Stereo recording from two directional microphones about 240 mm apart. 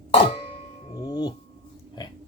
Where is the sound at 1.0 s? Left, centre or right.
Centre.